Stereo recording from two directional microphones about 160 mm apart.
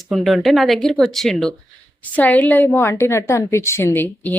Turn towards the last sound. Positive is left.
turn(degrees=10)  # may be behind; listen again after turning